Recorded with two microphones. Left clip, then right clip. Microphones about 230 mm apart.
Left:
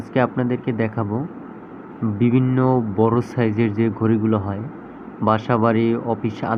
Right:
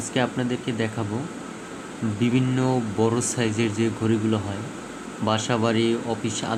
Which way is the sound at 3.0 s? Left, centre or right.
Centre.